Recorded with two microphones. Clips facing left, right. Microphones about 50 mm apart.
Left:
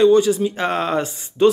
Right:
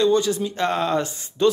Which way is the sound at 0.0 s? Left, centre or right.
Centre.